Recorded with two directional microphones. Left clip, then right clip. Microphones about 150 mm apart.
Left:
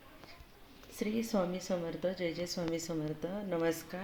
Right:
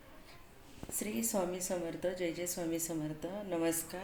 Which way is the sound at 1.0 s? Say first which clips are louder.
Left 2 dB; 55° left (ahead or behind).